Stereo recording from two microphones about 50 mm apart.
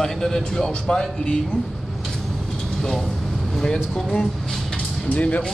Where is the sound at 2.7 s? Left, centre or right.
Centre.